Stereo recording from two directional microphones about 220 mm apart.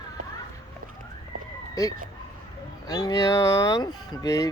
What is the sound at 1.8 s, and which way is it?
Speech, 15° left (ahead or behind).